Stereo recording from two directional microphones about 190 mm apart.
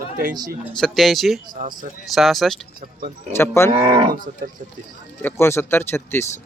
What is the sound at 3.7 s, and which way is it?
Cattle, 25° right (ahead or behind).